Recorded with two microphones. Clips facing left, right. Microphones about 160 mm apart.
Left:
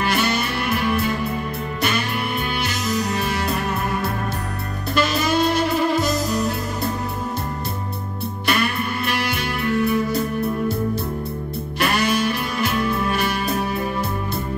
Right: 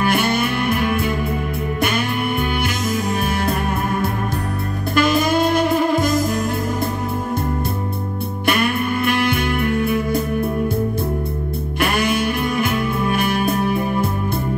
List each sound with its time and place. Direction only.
0.0 s music: 50° right (ahead or behind)
4.9 s music: 50° right (ahead or behind)
8.5 s music: 50° right (ahead or behind)
11.8 s music: 50° right (ahead or behind)